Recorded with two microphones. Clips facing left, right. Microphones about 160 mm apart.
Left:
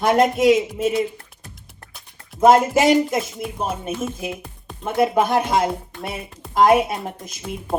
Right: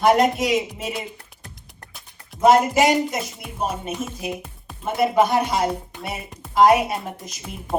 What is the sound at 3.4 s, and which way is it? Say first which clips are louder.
Speech: left 8 dB; centre (ahead or behind).